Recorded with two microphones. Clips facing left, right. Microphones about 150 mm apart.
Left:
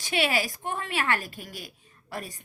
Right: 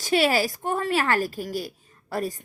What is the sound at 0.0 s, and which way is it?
Speech, 40° right (ahead or behind).